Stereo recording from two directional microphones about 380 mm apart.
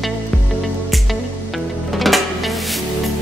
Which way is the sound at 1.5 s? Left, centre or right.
Centre.